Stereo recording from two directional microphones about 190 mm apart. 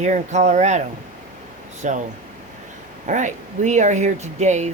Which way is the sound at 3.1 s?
40° right (ahead or behind).